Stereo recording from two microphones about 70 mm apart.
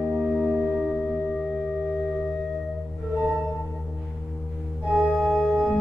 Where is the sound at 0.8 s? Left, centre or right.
Centre.